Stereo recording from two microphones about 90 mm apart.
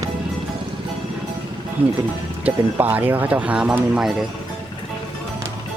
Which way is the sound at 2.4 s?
20° right (ahead or behind).